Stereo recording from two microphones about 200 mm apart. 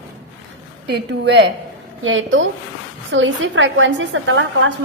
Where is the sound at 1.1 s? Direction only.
60° right (ahead or behind).